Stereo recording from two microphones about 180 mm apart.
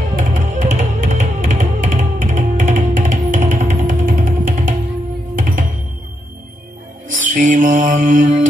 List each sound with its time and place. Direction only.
0.1 s music: 45° right (ahead or behind)
7.3 s mantra: 45° right (ahead or behind)